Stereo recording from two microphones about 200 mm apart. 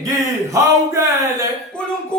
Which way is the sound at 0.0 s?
15° right (ahead or behind).